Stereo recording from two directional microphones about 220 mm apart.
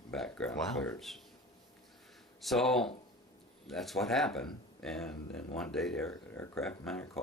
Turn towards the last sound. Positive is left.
turn(degrees=5)  # may be behind; listen again after turning